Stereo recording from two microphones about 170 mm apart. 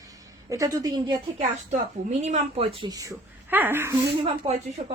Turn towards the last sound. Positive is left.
turn(degrees=-35)  # may be behind; listen again after turning